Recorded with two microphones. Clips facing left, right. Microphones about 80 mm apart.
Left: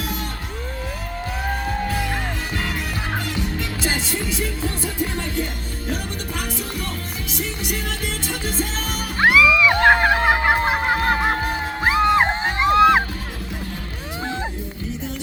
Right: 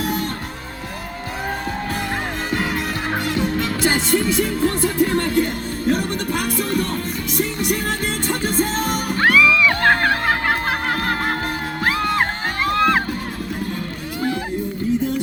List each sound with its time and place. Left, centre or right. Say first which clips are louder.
0.0 s music: right 6 dB; right
3.2 s music: right 6 dB; right
9.1 s music: left 1 dB; centre